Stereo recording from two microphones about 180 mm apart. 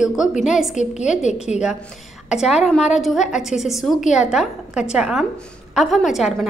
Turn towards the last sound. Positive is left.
turn(degrees=0)  # may be behind; listen again after turning